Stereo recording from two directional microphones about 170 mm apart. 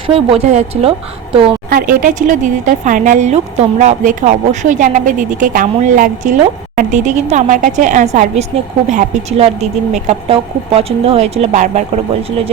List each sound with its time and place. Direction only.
0.1 s a woman's voice: 35° right (ahead or behind)
1.7 s a woman's voice: 55° right (ahead or behind)